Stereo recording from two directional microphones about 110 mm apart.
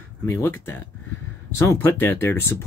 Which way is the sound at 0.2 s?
20° left (ahead or behind).